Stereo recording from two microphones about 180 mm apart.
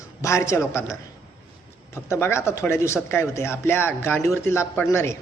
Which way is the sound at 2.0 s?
15° left (ahead or behind).